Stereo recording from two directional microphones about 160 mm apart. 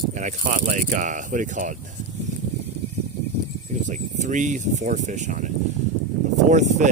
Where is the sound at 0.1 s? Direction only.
50° right (ahead or behind).